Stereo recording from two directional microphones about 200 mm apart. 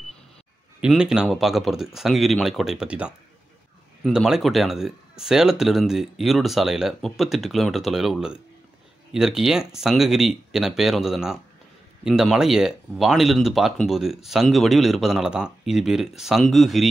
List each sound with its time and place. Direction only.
0.7 s speech: 5° right (ahead or behind)